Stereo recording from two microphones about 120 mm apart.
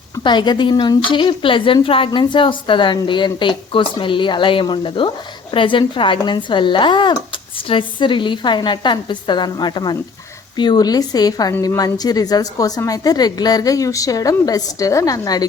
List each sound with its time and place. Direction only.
0.2 s a woman's voice: 40° left (ahead or behind)